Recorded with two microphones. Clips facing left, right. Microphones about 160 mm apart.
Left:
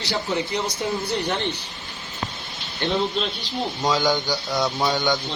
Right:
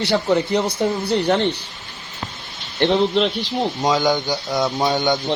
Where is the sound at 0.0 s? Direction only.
60° right (ahead or behind).